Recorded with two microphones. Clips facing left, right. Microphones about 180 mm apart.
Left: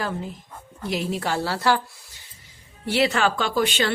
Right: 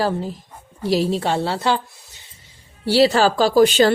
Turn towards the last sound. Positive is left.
turn(degrees=-40)  # may be behind; listen again after turning